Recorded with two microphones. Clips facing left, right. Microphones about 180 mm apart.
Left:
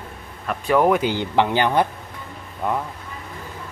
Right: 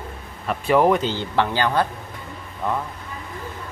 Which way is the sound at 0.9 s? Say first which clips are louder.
Left 2 dB; 15° left (ahead or behind).